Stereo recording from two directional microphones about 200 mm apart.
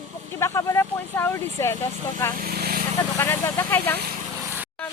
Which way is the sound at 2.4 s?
50° right (ahead or behind).